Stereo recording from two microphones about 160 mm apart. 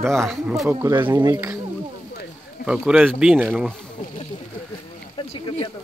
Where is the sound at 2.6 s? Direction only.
5° right (ahead or behind).